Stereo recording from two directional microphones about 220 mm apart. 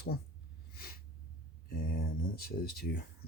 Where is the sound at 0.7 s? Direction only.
40° left (ahead or behind).